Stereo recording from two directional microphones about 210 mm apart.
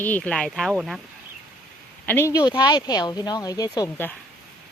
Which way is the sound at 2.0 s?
10° left (ahead or behind).